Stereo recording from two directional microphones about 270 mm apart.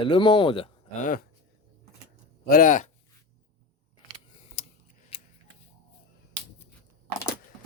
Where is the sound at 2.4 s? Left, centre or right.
Left.